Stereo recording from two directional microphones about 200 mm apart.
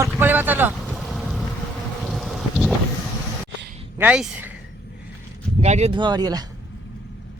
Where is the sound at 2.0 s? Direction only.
Centre (ahead or behind).